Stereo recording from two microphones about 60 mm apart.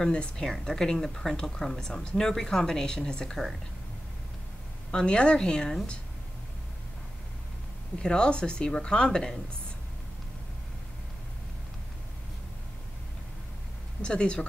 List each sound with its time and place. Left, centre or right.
0.0 s a woman's voice: centre
4.9 s a woman's voice: centre
8.0 s a woman's voice: centre
14.0 s a woman's voice: centre